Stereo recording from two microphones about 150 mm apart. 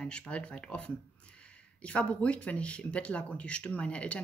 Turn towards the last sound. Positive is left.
turn(degrees=10)  # may be behind; listen again after turning